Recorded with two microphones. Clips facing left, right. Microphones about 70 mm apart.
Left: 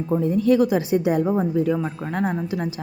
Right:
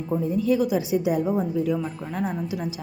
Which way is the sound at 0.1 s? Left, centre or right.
Left.